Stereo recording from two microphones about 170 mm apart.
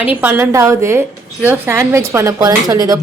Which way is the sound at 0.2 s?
10° right (ahead or behind).